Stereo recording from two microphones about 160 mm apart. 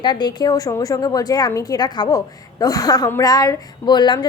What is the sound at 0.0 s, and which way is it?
A woman's voice, 25° left (ahead or behind).